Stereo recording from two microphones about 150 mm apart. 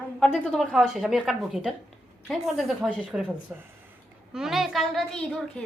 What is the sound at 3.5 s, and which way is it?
A woman's voice, 10° right (ahead or behind).